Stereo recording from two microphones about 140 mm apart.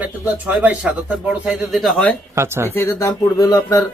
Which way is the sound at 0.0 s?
10° right (ahead or behind).